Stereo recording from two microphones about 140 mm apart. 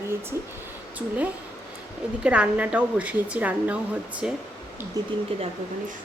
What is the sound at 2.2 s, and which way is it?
Speech, 10° right (ahead or behind).